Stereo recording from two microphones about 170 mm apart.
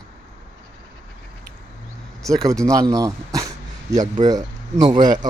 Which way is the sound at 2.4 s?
20° right (ahead or behind).